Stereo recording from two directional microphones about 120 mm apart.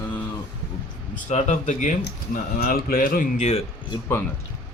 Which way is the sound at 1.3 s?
90° left.